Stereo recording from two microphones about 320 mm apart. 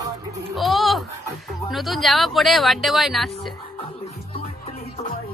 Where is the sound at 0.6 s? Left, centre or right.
Centre.